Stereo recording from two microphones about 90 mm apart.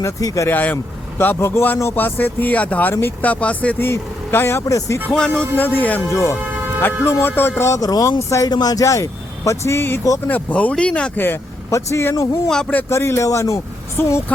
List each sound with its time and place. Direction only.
0.0 s speech: 40° left (ahead or behind)
0.4 s speech: 20° left (ahead or behind); by 4.9 s 35° left (ahead or behind)
5.0 s speech: 10° left (ahead or behind)
5.5 s speech: 20° left (ahead or behind)
7.8 s speech: 45° left (ahead or behind); by 10.0 s 30° left (ahead or behind)
10.2 s speech: 15° left (ahead or behind)
11.7 s speech: 35° left (ahead or behind)
12.5 s speech: 5° left (ahead or behind)
12.9 s speech: 30° left (ahead or behind)
14.0 s speech: 25° left (ahead or behind)